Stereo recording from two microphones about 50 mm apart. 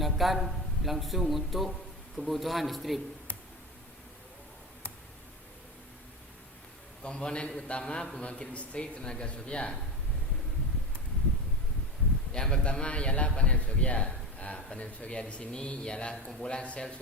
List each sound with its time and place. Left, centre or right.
0.0 s a man's voice: centre
7.0 s a man's voice: centre
12.3 s a man's voice: centre